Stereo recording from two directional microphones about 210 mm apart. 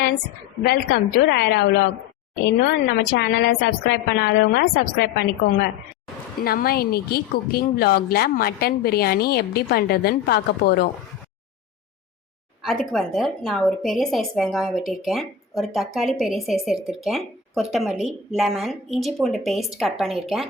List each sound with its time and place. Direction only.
0.6 s speech: 50° left (ahead or behind)
3.2 s a woman's voice: 55° left (ahead or behind)
6.4 s speech: 45° left (ahead or behind)
12.6 s a woman's voice: centre (ahead or behind)